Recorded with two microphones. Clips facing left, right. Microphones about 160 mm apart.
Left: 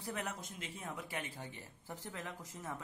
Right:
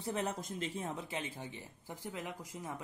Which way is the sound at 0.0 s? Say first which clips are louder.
Right 5 dB; 30° right (ahead or behind).